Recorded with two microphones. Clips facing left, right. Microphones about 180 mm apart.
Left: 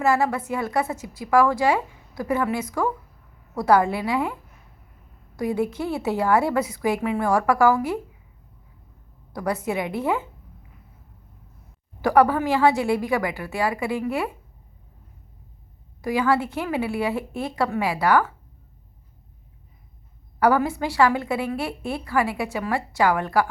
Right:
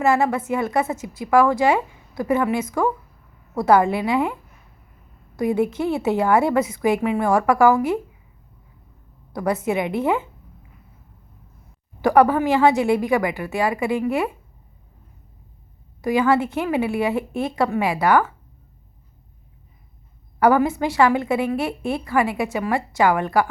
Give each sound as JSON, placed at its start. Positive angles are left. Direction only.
{"t": 0.0, "sound": "a woman's voice", "side_deg": -25}
{"t": 5.4, "sound": "a woman's voice", "side_deg": -20}
{"t": 9.3, "sound": "a woman's voice", "side_deg": -20}
{"t": 12.0, "sound": "a woman's voice", "side_deg": -20}
{"t": 16.0, "sound": "a woman's voice", "side_deg": -20}
{"t": 20.4, "sound": "a woman's voice", "side_deg": -20}